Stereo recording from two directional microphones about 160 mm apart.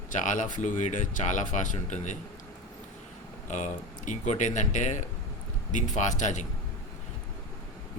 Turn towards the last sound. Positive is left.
turn(degrees=50)  # may be behind; listen again after turning